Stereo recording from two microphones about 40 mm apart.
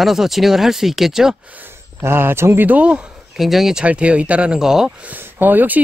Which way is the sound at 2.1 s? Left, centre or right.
Right.